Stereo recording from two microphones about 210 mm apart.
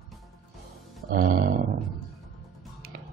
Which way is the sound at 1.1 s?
45° right (ahead or behind).